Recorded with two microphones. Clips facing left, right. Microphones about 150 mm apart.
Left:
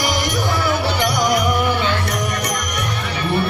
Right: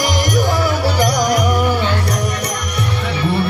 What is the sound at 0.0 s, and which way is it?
Music, 45° right (ahead or behind).